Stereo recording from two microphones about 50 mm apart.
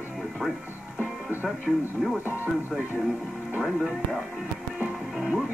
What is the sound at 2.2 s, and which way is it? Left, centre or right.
Speech, right.